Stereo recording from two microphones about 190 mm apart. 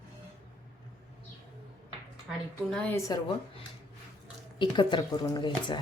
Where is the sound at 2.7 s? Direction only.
5° left (ahead or behind).